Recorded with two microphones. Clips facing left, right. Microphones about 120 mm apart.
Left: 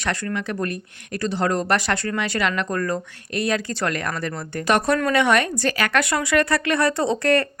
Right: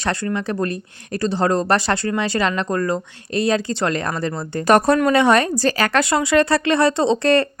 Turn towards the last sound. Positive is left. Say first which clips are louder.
# right 3 dB
turn(degrees=-30)  # may be behind; listen again after turning